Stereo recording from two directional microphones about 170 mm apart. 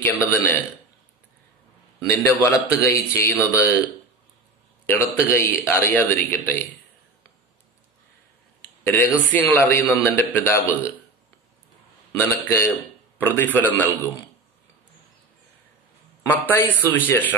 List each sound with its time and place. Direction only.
0.2 s a man's voice: 15° left (ahead or behind)
2.0 s a man's voice: 20° left (ahead or behind)
4.8 s a man's voice: 15° left (ahead or behind)
8.5 s a sound: 10° left (ahead or behind)
9.3 s a man's voice: 10° left (ahead or behind)
12.2 s a man's voice: 15° left (ahead or behind)
16.2 s a man's voice: 15° left (ahead or behind)